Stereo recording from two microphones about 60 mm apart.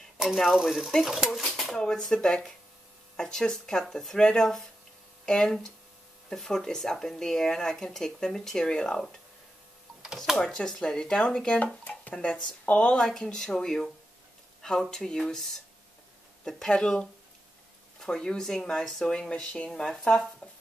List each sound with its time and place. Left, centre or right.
0.7 s speech: centre
10.1 s speech: centre
10.5 s speech: centre
13.0 s speech: centre